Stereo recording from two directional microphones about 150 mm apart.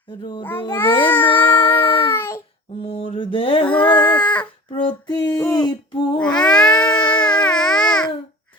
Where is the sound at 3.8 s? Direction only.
30° left (ahead or behind).